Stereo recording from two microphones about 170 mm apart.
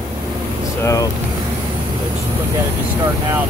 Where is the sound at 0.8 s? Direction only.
20° left (ahead or behind).